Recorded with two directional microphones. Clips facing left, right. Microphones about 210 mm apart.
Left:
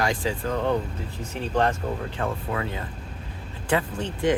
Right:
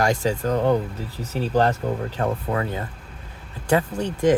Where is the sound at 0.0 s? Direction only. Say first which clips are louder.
Right 4 dB; 40° right (ahead or behind).